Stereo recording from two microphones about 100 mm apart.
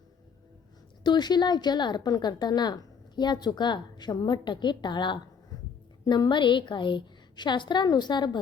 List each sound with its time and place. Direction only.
1.0 s a woman's voice: 45° left (ahead or behind)